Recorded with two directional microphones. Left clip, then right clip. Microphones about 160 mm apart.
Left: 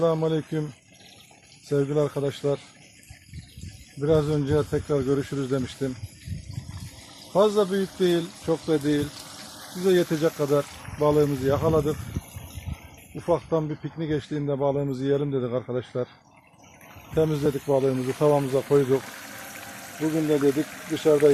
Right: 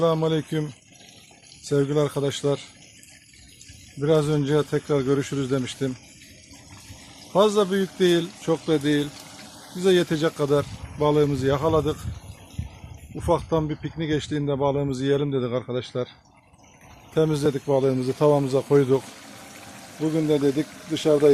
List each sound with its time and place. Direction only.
0.0 s speech: 15° right (ahead or behind)
1.7 s speech: 15° right (ahead or behind)
4.0 s speech: 15° right (ahead or behind)
7.3 s speech: 20° right (ahead or behind)
13.2 s speech: 20° right (ahead or behind)
17.2 s speech: 15° right (ahead or behind)
18.9 s pour: centre (ahead or behind)